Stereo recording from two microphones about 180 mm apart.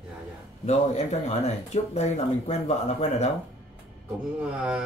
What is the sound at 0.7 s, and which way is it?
Speech, 40° left (ahead or behind).